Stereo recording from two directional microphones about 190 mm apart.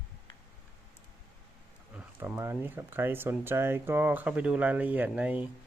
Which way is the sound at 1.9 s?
10° right (ahead or behind).